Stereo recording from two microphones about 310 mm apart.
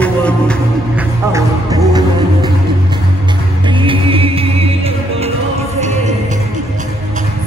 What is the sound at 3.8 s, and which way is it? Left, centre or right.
Music, centre.